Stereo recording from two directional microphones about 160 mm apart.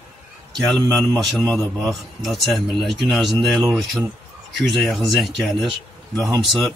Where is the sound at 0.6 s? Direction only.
5° left (ahead or behind).